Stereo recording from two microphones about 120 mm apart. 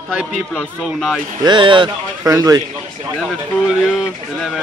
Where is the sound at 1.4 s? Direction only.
40° right (ahead or behind).